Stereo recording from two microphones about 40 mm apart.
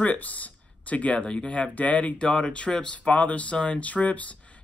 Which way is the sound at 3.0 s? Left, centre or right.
Left.